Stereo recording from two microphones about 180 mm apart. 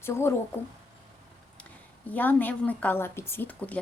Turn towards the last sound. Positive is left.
turn(degrees=10)  # may be behind; listen again after turning